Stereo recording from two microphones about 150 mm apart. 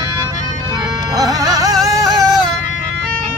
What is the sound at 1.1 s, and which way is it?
Music, 25° right (ahead or behind).